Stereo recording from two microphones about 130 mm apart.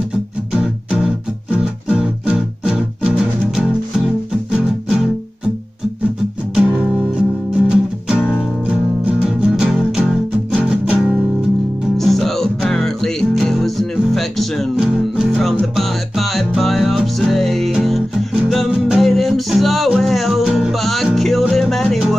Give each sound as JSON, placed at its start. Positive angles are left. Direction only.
{"t": 0.5, "sound": "music", "side_deg": -5}
{"t": 6.5, "sound": "music", "side_deg": -5}
{"t": 8.2, "sound": "music", "side_deg": 15}
{"t": 8.6, "sound": "music", "side_deg": -5}
{"t": 12.0, "sound": "music", "side_deg": 0}